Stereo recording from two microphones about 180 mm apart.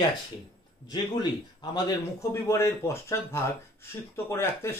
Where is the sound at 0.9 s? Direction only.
25° left (ahead or behind).